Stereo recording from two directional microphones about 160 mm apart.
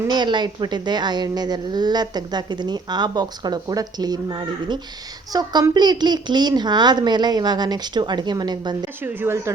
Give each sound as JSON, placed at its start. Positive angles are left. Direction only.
{"t": 0.1, "sound": "speech", "side_deg": -30}
{"t": 9.0, "sound": "speech", "side_deg": -15}